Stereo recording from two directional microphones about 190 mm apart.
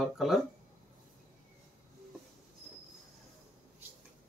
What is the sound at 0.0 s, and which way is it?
Speech, centre (ahead or behind).